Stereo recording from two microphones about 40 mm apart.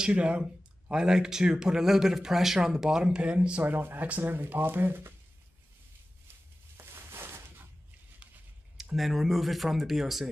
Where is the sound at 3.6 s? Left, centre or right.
Right.